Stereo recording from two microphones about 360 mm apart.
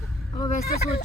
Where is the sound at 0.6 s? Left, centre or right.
Left.